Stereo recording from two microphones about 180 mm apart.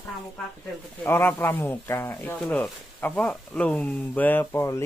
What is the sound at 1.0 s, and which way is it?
Speech, 10° left (ahead or behind).